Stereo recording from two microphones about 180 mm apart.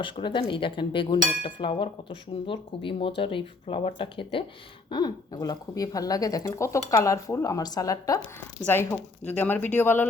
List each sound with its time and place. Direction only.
0.0 s speech: 25° left (ahead or behind); by 10.1 s 10° left (ahead or behind)